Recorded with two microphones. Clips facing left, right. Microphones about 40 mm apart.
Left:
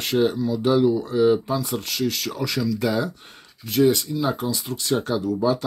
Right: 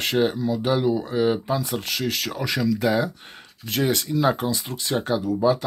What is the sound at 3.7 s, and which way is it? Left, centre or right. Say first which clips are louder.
Speech: left 4 dB; right.